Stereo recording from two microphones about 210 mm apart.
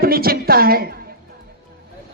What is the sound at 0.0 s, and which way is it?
Speech, 45° right (ahead or behind).